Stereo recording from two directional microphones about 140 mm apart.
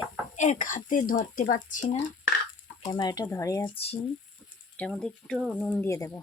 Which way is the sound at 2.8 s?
30° left (ahead or behind).